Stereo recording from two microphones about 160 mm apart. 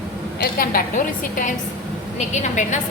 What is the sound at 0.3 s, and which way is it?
Speech, 70° left (ahead or behind).